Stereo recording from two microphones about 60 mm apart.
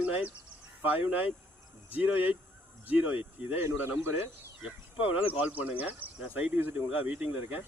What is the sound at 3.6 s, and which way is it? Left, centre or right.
Speech, right.